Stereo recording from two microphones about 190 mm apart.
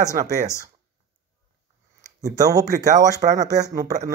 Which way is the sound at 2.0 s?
20° right (ahead or behind).